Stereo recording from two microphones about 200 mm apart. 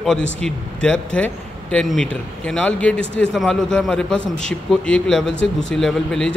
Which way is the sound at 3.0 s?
60° left (ahead or behind).